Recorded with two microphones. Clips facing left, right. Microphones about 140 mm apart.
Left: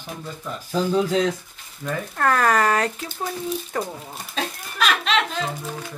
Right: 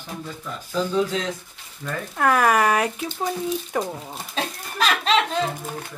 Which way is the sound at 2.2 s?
10° right (ahead or behind).